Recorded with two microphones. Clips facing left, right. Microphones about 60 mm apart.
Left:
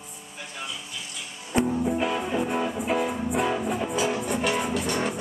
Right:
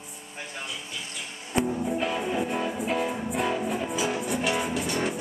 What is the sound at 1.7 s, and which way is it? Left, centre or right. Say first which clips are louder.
Music: left 2 dB; centre.